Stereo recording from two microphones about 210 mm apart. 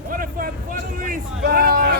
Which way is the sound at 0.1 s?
40° right (ahead or behind).